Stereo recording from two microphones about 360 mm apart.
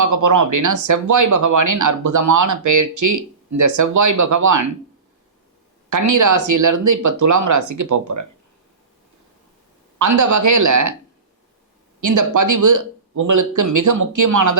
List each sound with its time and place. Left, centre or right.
0.0 s speech: right
5.9 s speech: right
10.0 s speech: right
11.9 s speech: right